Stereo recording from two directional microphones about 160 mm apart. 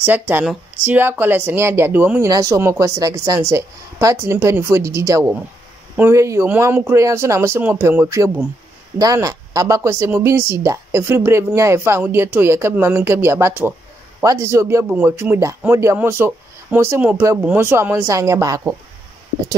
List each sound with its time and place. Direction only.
0.0 s a woman's voice: 10° right (ahead or behind)